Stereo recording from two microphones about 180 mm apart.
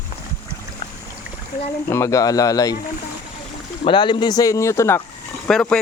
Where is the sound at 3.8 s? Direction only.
25° left (ahead or behind).